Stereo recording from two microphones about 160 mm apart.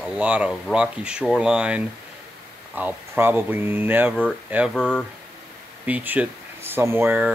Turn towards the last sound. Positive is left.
turn(degrees=-10)  # may be behind; listen again after turning